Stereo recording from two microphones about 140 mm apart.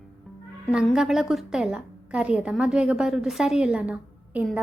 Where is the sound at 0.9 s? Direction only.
Centre (ahead or behind).